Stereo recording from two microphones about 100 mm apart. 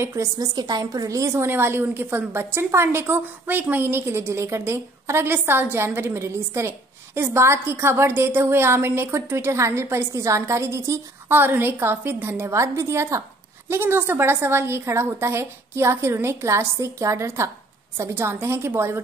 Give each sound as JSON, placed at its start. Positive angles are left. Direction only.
{"t": 0.0, "sound": "a woman's voice", "side_deg": -30}